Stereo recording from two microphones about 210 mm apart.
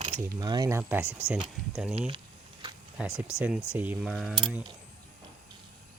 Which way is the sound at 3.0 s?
5° right (ahead or behind).